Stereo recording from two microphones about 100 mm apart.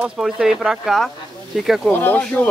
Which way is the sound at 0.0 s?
5° right (ahead or behind).